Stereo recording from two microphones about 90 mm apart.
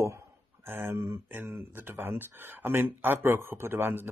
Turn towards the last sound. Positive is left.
turn(degrees=-25)  # may be behind; listen again after turning